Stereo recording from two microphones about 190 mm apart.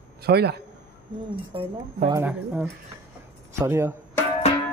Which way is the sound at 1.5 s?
30° right (ahead or behind).